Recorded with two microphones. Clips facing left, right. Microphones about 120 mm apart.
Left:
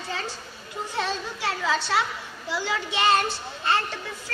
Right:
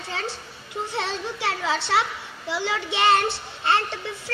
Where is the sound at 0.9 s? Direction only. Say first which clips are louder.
Left 1 dB; 25° right (ahead or behind).